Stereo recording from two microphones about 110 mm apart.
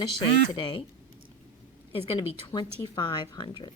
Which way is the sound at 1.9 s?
60° left (ahead or behind).